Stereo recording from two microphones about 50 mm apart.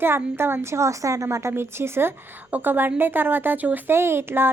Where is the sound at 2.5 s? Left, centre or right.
Right.